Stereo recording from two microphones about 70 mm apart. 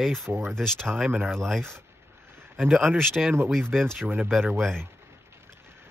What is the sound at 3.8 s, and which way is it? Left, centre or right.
Speech, right.